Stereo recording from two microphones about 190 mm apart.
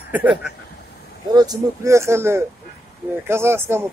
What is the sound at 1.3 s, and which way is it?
Speech, 20° right (ahead or behind).